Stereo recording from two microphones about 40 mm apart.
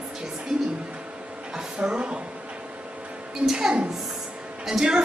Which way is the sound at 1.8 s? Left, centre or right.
Right.